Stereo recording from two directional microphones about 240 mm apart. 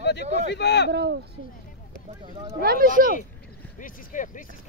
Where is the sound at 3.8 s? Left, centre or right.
Left.